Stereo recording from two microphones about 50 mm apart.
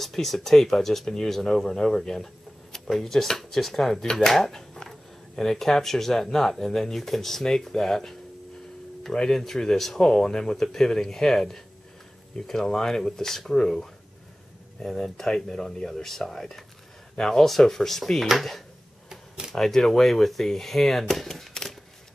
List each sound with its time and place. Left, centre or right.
0.0 s speech: centre
14.9 s speech: centre
19.0 s a sound: centre
19.5 s speech: centre